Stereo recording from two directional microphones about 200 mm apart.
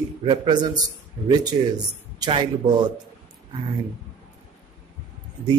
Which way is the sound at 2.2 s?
20° right (ahead or behind).